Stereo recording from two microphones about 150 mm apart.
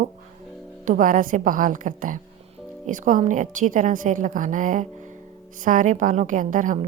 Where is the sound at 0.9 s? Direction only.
60° right (ahead or behind).